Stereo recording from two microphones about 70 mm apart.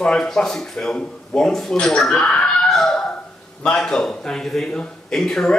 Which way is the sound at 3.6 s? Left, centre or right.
Centre.